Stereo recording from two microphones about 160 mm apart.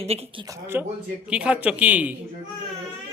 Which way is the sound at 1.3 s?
5° right (ahead or behind).